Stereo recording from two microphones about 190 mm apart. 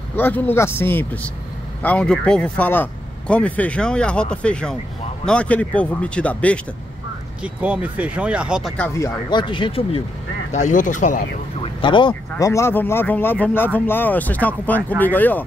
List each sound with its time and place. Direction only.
0.1 s speech: 10° left (ahead or behind)
7.4 s speech: 5° right (ahead or behind)
8.7 s speech: 10° left (ahead or behind); by 10.0 s 30° left (ahead or behind)
10.5 s speech: 40° left (ahead or behind)
11.6 s a sound: 25° left (ahead or behind)
12.4 s speech: 15° left (ahead or behind)